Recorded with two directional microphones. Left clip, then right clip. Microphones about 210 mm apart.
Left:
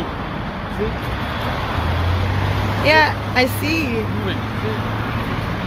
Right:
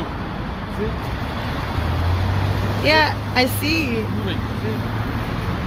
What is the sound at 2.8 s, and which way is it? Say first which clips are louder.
Speech: left 2 dB; 10° right (ahead or behind).